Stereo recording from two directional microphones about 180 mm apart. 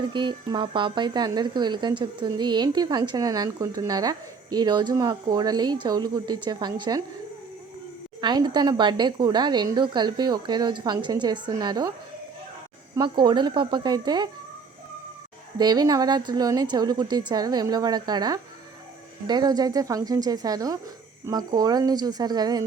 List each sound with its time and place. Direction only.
0.1 s a woman's voice: 25° right (ahead or behind)
8.2 s a woman's voice: 25° right (ahead or behind)
13.0 s a woman's voice: 25° right (ahead or behind)
15.5 s a woman's voice: 20° right (ahead or behind)